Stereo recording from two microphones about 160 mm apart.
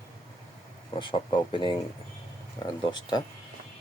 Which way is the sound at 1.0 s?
30° left (ahead or behind).